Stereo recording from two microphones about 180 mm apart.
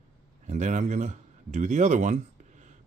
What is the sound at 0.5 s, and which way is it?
Speech, 40° right (ahead or behind).